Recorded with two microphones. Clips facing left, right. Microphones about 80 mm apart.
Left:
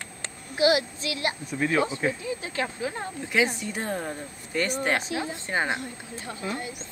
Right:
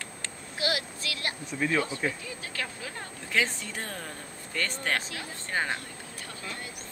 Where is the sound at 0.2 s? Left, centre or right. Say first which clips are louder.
Left 10 dB; left.